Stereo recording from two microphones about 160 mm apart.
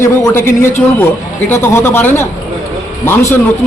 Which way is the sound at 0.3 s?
15° left (ahead or behind).